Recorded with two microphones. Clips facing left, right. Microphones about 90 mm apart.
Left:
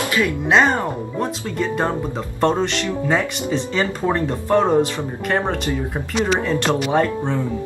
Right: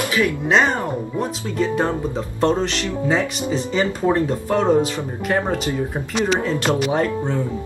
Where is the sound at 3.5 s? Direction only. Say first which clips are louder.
Even; 10° right (ahead or behind).